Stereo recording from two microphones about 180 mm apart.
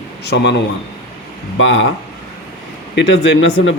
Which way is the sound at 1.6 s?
90° left.